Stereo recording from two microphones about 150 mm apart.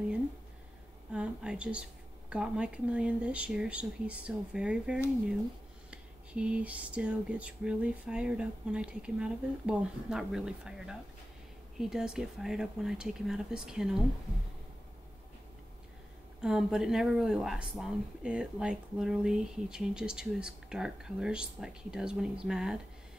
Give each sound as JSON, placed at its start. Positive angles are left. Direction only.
{"t": 1.1, "sound": "a sound", "side_deg": -5}
{"t": 11.8, "sound": "speech", "side_deg": -5}
{"t": 16.3, "sound": "speech", "side_deg": -5}